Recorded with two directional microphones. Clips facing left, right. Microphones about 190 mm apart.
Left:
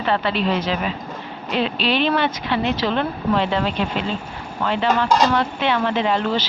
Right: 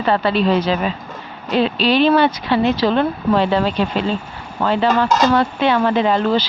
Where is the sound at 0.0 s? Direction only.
40° right (ahead or behind).